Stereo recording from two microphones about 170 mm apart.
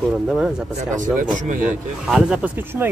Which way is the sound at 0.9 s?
50° right (ahead or behind).